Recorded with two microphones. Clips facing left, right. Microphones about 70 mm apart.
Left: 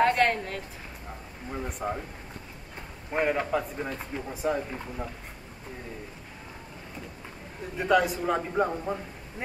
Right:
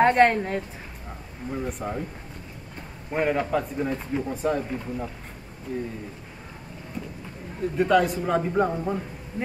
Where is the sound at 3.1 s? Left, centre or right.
Centre.